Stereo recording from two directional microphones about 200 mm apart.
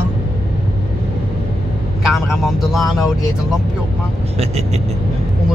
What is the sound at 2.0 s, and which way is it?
Speech, centre (ahead or behind).